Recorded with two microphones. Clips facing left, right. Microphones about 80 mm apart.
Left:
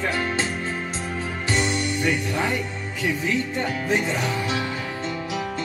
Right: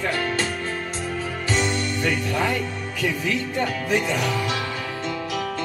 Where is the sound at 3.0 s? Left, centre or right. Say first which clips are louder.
Left 1 dB; left.